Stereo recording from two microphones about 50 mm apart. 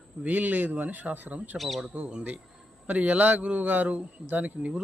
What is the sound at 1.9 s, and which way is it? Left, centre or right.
A man's voice, right.